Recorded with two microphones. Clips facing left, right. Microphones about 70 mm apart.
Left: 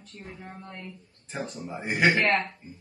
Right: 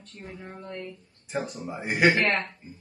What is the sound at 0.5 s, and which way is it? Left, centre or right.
Speech, centre.